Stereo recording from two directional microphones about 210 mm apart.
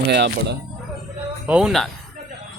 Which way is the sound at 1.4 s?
5° right (ahead or behind).